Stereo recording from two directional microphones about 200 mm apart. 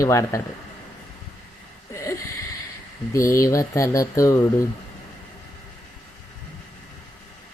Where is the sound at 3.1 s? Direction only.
15° left (ahead or behind).